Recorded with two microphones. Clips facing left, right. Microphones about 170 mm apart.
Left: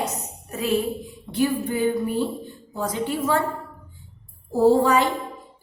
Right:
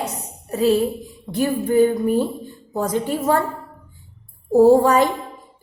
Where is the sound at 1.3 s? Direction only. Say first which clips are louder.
Right 6 dB; 45° right (ahead or behind).